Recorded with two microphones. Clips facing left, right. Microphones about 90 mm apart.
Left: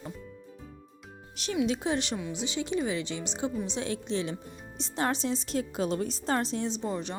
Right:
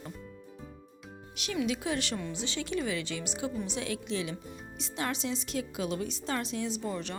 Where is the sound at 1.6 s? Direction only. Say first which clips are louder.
Left 3 dB; 30° left (ahead or behind).